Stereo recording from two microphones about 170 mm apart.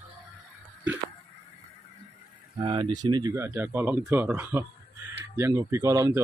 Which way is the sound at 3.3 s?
10° right (ahead or behind).